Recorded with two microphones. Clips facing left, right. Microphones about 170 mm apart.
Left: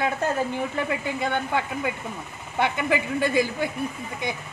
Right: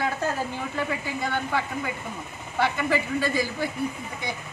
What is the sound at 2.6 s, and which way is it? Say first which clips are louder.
Speech: left 1 dB; 20° left (ahead or behind).